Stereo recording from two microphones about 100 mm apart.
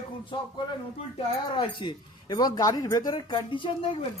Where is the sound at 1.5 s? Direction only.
50° left (ahead or behind).